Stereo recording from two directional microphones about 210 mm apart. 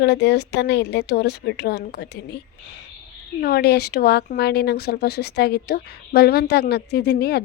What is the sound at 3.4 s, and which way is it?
Speech, 45° left (ahead or behind).